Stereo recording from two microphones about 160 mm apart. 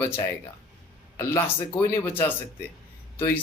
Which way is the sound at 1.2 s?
15° left (ahead or behind).